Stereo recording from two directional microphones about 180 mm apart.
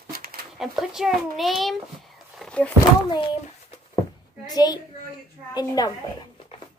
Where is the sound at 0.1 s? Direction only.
55° right (ahead or behind).